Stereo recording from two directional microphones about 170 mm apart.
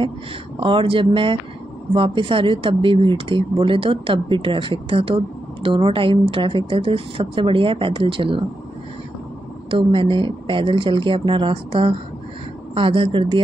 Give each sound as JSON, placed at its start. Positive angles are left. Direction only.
{"t": 0.6, "sound": "a woman's voice", "side_deg": -30}
{"t": 9.7, "sound": "a woman's voice", "side_deg": -30}